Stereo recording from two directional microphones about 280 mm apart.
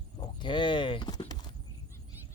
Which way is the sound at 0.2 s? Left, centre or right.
Centre.